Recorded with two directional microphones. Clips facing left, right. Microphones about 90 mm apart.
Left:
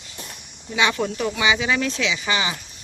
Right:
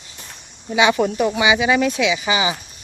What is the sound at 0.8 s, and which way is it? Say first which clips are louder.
Speech: right 6 dB; 15° right (ahead or behind).